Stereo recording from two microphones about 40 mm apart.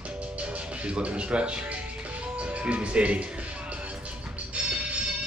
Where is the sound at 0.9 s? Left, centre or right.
Right.